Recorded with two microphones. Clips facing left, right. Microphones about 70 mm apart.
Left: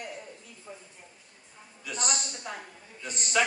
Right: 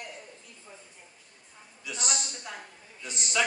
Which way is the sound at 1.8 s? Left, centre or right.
Left.